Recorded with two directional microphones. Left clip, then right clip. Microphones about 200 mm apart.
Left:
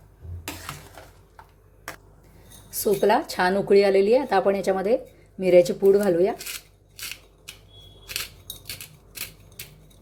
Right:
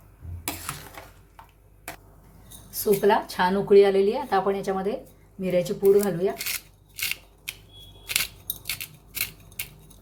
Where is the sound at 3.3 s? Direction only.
40° left (ahead or behind).